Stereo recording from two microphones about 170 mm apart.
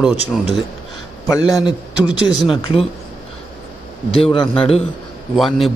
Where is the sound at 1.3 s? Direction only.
20° left (ahead or behind).